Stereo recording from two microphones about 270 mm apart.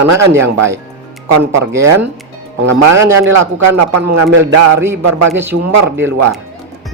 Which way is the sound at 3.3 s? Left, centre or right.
Right.